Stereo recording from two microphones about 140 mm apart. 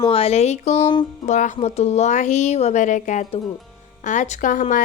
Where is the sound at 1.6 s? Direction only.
50° left (ahead or behind).